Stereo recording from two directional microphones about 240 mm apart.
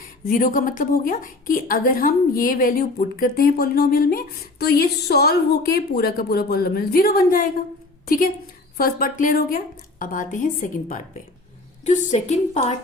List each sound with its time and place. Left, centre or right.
0.3 s a woman's voice: left